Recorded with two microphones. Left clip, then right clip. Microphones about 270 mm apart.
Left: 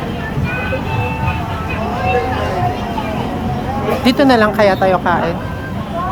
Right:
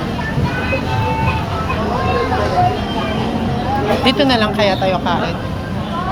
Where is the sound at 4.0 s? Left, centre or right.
Left.